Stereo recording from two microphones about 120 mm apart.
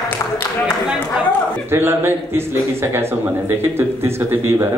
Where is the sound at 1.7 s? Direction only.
20° right (ahead or behind).